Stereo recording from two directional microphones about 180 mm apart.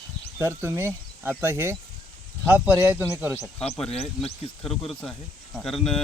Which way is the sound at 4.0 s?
35° left (ahead or behind).